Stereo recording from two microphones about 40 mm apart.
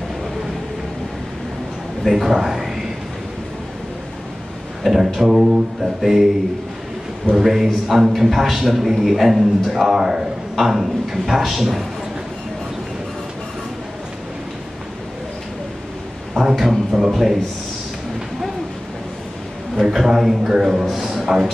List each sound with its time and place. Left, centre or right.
2.0 s a man's voice: centre
4.8 s a man's voice: centre
7.3 s a man's voice: centre
9.8 s a man's voice: centre
16.5 s music: centre
17.1 s a man's voice: centre
19.7 s a man's voice: centre